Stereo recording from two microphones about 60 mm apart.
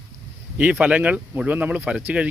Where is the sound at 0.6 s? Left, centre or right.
Right.